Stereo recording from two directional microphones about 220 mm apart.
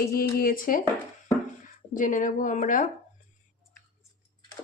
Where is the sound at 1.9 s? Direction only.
35° left (ahead or behind).